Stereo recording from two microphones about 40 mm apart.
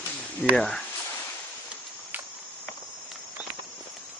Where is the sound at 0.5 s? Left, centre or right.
Centre.